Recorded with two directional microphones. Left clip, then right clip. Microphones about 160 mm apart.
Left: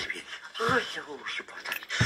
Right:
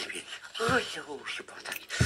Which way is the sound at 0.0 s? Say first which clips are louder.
Left 3 dB; 40° right (ahead or behind).